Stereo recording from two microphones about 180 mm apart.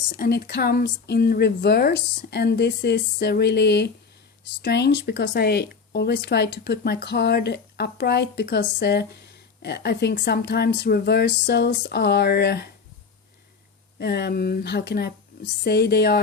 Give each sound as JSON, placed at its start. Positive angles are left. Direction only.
{"t": 0.2, "sound": "a woman's voice", "side_deg": 60}
{"t": 14.0, "sound": "speech", "side_deg": 65}